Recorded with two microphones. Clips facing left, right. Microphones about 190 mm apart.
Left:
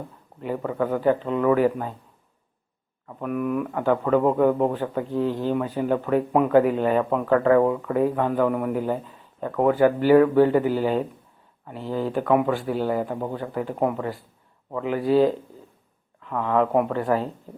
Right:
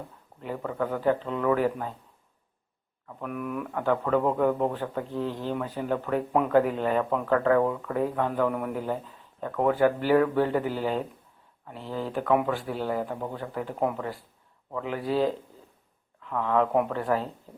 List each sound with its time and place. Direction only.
0.4 s speech: 10° left (ahead or behind)
3.2 s speech: 5° left (ahead or behind)
13.1 s speech: 25° left (ahead or behind)
13.3 s speech: 5° left (ahead or behind)